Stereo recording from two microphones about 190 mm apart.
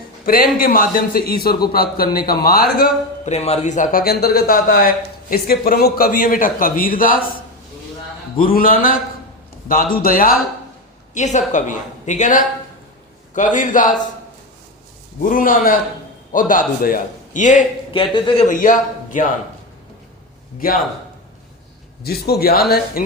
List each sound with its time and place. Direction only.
0.3 s a man's voice: 50° left (ahead or behind)
3.2 s a man's voice: 35° left (ahead or behind)
8.4 s a man's voice: 50° left (ahead or behind)
11.1 s a woman's voice: 40° left (ahead or behind)
15.2 s a man's voice: 45° left (ahead or behind)
17.9 s speech: 30° left (ahead or behind)
18.4 s a man's voice: 45° left (ahead or behind)
20.6 s a man's voice: 50° left (ahead or behind)
22.0 s a man's voice: 55° left (ahead or behind)